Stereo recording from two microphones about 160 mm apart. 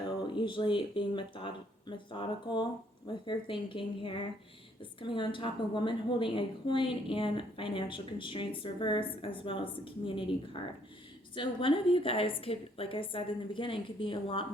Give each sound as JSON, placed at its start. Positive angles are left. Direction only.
{"t": 0.2, "sound": "a woman's voice", "side_deg": 30}